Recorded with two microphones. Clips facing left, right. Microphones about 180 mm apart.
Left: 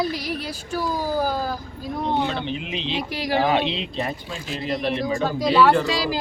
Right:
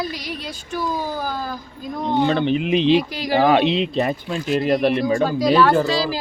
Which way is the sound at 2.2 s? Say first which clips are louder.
Right 8 dB; 55° right (ahead or behind).